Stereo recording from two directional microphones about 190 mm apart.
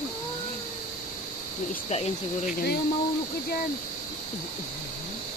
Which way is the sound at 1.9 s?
35° left (ahead or behind).